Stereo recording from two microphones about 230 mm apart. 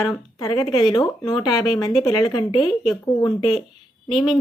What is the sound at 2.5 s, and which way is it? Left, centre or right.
Speech, centre.